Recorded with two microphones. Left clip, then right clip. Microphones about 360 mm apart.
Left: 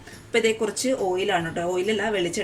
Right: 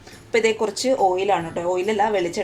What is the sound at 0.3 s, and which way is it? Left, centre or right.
Speech, centre.